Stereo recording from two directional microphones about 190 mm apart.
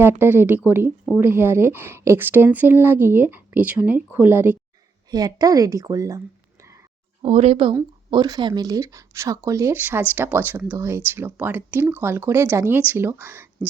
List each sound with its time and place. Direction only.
0.0 s speech: 10° right (ahead or behind)
7.2 s speech: 30° right (ahead or behind)
7.7 s speech: 20° right (ahead or behind)